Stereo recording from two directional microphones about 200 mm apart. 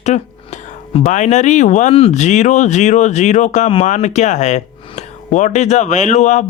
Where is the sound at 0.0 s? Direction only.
35° left (ahead or behind).